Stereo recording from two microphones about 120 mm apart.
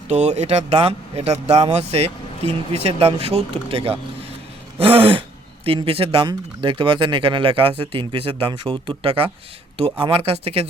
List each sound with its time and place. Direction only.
0.1 s a man's voice: 70° right (ahead or behind)